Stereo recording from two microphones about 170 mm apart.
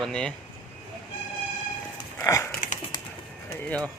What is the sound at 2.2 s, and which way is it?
Dog, 15° left (ahead or behind).